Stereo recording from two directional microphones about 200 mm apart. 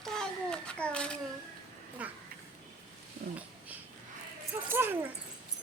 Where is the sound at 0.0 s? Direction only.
5° left (ahead or behind).